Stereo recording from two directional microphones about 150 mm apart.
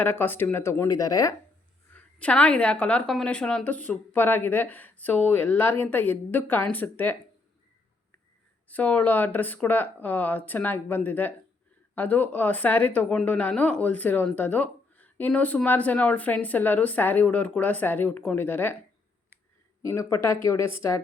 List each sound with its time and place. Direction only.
0.0 s a woman's voice: 15° left (ahead or behind)
1.9 s a woman's voice: 10° left (ahead or behind)
8.6 s a woman's voice: 10° left (ahead or behind)
19.8 s a woman's voice: 20° left (ahead or behind)